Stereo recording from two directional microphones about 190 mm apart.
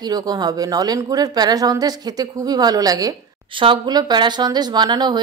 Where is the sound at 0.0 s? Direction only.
20° right (ahead or behind).